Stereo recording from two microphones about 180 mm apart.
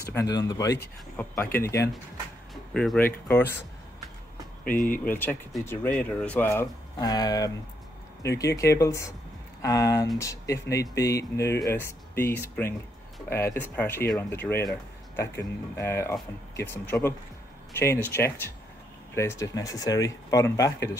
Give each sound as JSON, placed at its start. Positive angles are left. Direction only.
{"t": 0.1, "sound": "speech", "side_deg": 20}
{"t": 2.5, "sound": "speech", "side_deg": 0}
{"t": 4.6, "sound": "speech", "side_deg": 50}
{"t": 5.1, "sound": "speech", "side_deg": 10}